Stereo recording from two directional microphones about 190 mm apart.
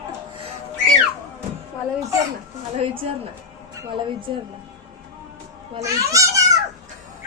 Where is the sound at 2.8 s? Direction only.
30° right (ahead or behind).